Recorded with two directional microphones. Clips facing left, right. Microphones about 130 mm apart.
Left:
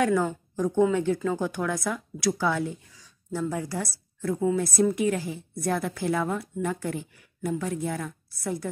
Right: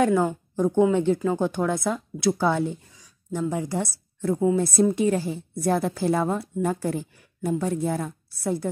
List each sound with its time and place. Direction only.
0.0 s a woman's voice: 25° right (ahead or behind)
3.3 s a woman's voice: 15° right (ahead or behind)